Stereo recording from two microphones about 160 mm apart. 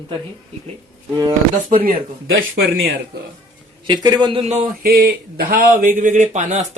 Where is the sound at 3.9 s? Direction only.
30° right (ahead or behind).